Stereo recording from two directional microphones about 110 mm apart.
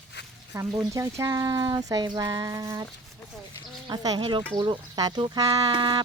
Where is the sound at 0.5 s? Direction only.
25° right (ahead or behind).